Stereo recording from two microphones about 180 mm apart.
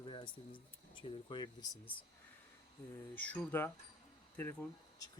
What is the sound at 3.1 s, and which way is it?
Speech, 10° left (ahead or behind).